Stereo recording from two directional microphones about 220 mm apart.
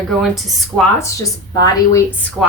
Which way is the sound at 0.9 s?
15° left (ahead or behind).